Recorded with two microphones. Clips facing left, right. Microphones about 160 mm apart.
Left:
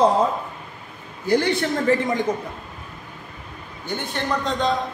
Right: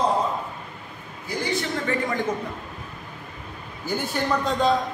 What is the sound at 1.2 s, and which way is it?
Speech, 70° left (ahead or behind).